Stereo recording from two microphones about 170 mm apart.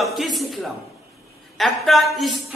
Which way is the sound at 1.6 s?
Centre (ahead or behind).